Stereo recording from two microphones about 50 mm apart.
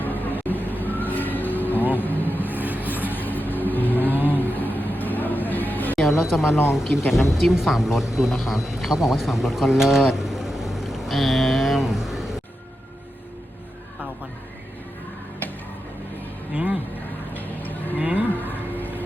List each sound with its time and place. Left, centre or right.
0.0 s vehicle: left
2.5 s vehicle: right
3.0 s vehicle: left
6.1 s speech: centre
16.5 s a sound: right
17.3 s music: left
17.9 s a sound: right
18.3 s music: left